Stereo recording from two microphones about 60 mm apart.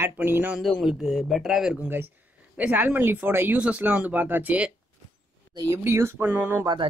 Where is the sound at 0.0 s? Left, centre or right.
Right.